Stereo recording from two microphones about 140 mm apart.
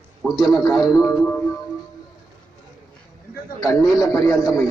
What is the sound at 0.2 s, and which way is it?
Speech, 5° right (ahead or behind).